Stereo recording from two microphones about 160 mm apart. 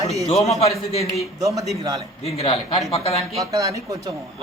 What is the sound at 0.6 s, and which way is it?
Speech, 40° left (ahead or behind).